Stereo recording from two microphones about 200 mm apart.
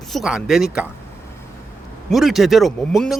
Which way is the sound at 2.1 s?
Centre (ahead or behind).